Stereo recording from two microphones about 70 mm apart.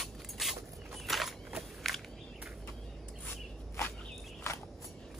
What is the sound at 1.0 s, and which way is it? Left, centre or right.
Walk, centre.